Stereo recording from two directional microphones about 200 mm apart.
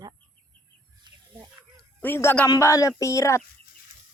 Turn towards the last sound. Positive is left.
turn(degrees=15)  # may be behind; listen again after turning